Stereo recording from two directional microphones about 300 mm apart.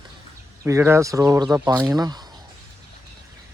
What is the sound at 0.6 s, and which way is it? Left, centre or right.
A man's voice, centre.